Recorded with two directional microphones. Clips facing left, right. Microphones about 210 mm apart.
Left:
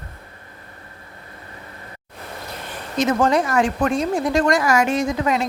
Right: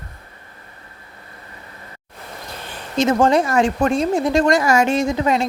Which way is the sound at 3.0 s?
25° right (ahead or behind).